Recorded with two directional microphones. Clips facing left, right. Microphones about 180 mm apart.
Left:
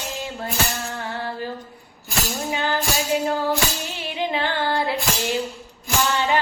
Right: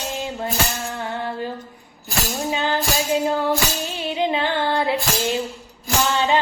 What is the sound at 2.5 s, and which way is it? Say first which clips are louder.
Music: right 2 dB; 20° right (ahead or behind).